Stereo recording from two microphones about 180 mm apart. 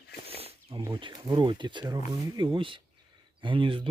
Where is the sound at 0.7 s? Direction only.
25° right (ahead or behind).